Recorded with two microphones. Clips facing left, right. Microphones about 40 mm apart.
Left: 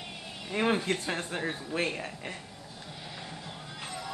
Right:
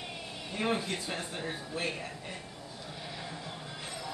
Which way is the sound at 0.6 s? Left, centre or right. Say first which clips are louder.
Left 4 dB; left.